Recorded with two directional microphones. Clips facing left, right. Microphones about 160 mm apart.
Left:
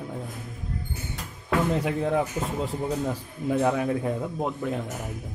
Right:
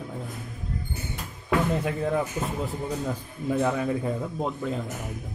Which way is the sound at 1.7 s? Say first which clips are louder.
Left 1 dB; 10° left (ahead or behind).